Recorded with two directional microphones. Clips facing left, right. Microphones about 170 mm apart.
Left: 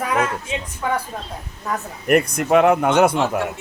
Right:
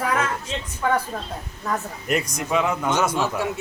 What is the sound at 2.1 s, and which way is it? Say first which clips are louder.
Speech: left 8 dB; 60° left (ahead or behind).